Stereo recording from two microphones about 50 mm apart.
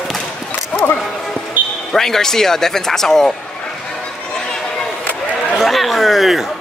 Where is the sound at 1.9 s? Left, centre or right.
Centre.